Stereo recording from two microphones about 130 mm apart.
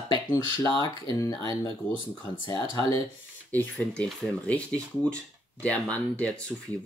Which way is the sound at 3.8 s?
5° left (ahead or behind).